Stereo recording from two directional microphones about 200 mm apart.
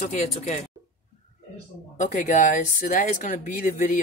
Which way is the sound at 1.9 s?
40° left (ahead or behind).